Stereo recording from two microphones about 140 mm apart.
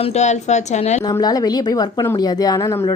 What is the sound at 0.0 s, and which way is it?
A woman's voice, 55° left (ahead or behind).